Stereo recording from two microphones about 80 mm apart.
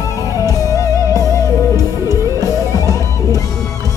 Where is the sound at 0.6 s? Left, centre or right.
Left.